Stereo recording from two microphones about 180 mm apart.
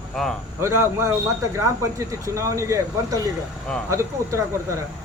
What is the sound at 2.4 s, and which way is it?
Speech, 15° right (ahead or behind).